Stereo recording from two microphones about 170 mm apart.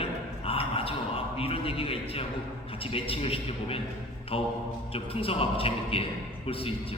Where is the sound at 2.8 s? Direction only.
35° left (ahead or behind).